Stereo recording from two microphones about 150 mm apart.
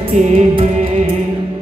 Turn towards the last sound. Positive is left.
turn(degrees=-45)  # may be behind; listen again after turning